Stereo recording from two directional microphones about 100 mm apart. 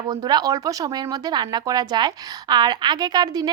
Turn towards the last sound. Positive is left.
turn(degrees=-40)  # may be behind; listen again after turning